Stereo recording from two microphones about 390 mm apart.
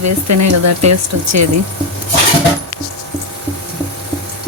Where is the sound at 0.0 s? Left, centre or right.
Right.